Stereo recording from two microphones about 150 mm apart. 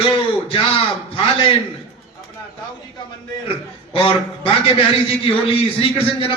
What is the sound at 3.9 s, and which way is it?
Speech, 35° left (ahead or behind).